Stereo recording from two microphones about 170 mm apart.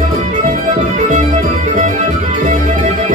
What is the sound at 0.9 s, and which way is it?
Music, 45° right (ahead or behind).